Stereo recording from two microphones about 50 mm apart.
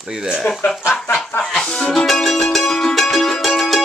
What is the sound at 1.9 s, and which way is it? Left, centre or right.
Music, centre.